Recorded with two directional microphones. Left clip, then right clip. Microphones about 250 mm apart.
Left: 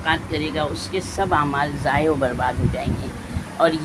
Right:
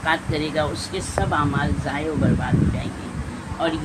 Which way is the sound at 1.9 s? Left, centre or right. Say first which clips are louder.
Left 7 dB; left.